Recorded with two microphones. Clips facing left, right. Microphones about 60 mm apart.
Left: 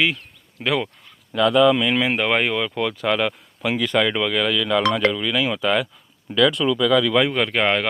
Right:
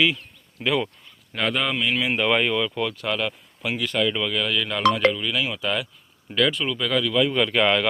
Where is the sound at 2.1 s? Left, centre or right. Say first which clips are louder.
Left 1 dB; left.